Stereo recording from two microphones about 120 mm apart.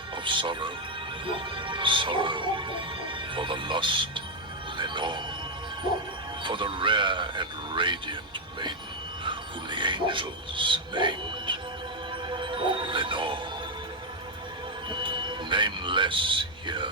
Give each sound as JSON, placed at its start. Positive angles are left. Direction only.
{"t": 0.3, "sound": "speech", "side_deg": -45}
{"t": 6.4, "sound": "speech", "side_deg": -45}
{"t": 9.2, "sound": "speech", "side_deg": -40}
{"t": 12.3, "sound": "music", "side_deg": -45}
{"t": 14.8, "sound": "speech", "side_deg": -40}